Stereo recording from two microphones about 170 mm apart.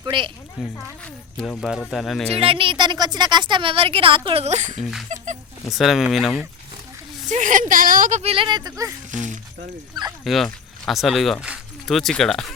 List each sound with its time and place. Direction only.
0.0 s speech: 30° right (ahead or behind)
0.6 s speech: 5° right (ahead or behind)
1.0 s speech: 10° left (ahead or behind)
2.3 s a woman's voice: 35° right (ahead or behind)
4.8 s speech: centre (ahead or behind)
5.1 s speech: 45° right (ahead or behind)
5.7 s speech: centre (ahead or behind)
7.3 s speech: 50° right (ahead or behind); by 8.9 s 20° right (ahead or behind)
10.2 s speech: centre (ahead or behind)